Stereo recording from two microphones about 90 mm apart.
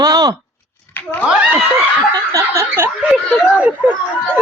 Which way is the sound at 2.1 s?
35° right (ahead or behind).